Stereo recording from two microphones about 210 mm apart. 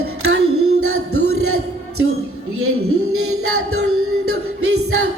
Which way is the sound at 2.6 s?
90° right.